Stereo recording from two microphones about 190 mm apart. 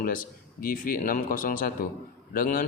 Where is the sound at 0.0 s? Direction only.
45° left (ahead or behind).